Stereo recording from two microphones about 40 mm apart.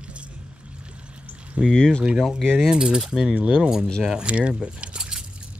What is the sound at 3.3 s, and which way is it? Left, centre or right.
Speech, right.